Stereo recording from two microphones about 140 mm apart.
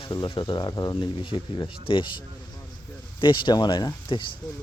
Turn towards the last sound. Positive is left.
turn(degrees=35)  # may be behind; listen again after turning